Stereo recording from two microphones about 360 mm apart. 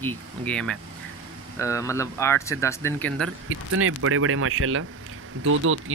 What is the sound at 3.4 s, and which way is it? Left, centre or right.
Speech, right.